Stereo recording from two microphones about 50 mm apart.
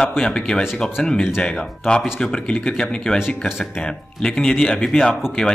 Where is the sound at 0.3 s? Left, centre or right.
Centre.